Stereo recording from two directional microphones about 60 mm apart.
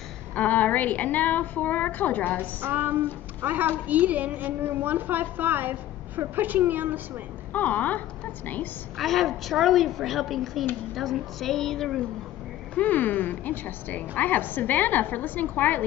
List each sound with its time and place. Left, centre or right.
0.3 s a woman's voice: left
2.6 s a woman's voice: right
7.5 s a woman's voice: left
8.9 s a woman's voice: centre
12.7 s a woman's voice: left